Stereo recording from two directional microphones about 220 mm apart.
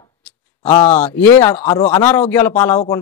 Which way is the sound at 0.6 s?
20° left (ahead or behind).